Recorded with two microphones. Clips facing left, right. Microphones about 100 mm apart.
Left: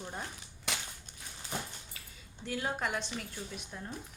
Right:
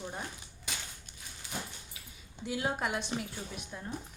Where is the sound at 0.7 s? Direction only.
75° left (ahead or behind).